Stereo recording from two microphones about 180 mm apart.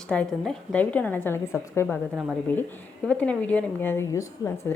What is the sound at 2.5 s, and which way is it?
A woman's voice, 10° left (ahead or behind).